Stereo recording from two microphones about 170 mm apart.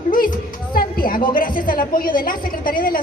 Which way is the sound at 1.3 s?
55° left (ahead or behind).